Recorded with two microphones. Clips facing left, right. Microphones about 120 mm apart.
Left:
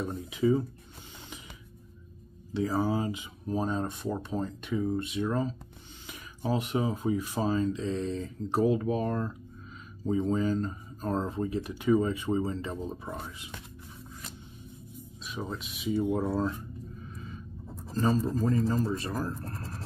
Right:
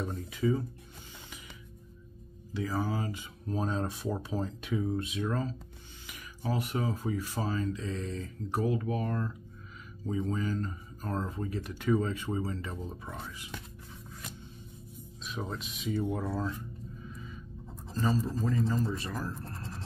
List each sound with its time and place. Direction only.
0.3 s speech: 20° left (ahead or behind)
2.5 s speech: 40° left (ahead or behind)
2.8 s speech: 20° left (ahead or behind); by 5.3 s centre (ahead or behind)
5.3 s speech: 15° left (ahead or behind)
15.2 s speech: centre (ahead or behind)
18.2 s a man's voice: 45° left (ahead or behind)